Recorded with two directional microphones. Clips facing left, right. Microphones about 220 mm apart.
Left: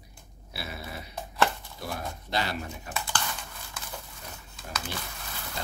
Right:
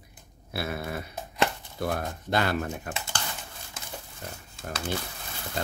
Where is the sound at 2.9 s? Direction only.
20° right (ahead or behind).